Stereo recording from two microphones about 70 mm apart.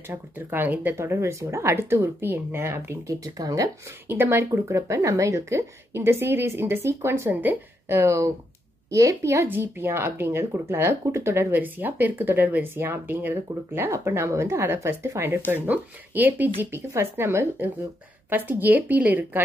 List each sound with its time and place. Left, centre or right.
0.1 s speech: right
0.9 s speech: right
3.3 s speech: right
4.1 s speech: right
4.5 s a woman's voice: right
9.5 s speech: right
18.3 s speech: right